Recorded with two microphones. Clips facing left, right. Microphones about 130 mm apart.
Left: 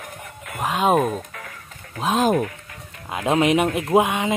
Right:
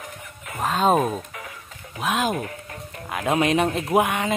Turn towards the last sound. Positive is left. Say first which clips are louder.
# left 2 dB
turn(degrees=20)  # may be behind; listen again after turning